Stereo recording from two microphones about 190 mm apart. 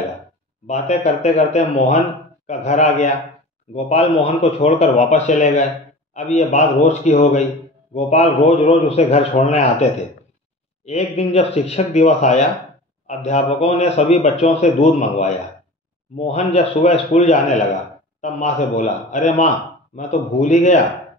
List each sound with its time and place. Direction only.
0.7 s speech: 35° left (ahead or behind)
10.9 s speech: 35° left (ahead or behind)